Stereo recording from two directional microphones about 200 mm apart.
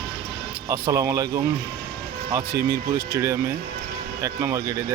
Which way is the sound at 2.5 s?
55° right (ahead or behind).